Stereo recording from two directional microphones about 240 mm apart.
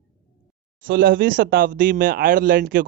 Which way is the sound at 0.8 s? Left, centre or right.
Right.